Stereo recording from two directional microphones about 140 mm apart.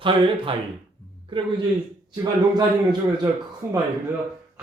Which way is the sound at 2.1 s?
30° right (ahead or behind).